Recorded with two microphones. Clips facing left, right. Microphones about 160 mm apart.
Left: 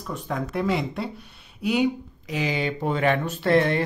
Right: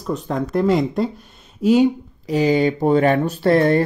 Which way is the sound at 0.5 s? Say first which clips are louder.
Right 9 dB; 40° right (ahead or behind).